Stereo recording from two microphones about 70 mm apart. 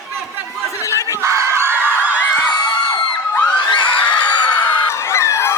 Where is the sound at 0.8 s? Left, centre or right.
Left.